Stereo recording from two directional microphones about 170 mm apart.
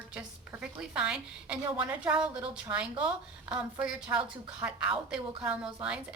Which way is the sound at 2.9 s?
30° right (ahead or behind).